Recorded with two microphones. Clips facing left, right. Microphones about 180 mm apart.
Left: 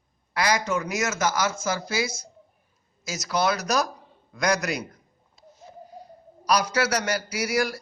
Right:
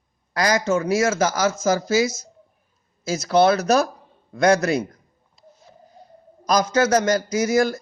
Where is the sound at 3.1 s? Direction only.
30° right (ahead or behind).